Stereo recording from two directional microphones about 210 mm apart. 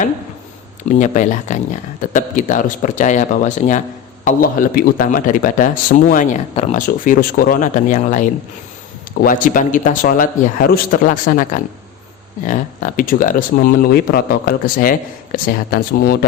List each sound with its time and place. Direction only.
0.9 s a man's voice: 35° left (ahead or behind)